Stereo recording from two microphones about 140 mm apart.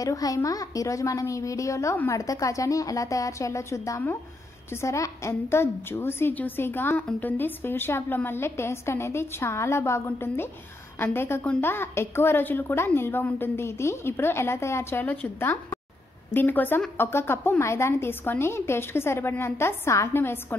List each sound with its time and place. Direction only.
0.0 s a woman's voice: 25° left (ahead or behind)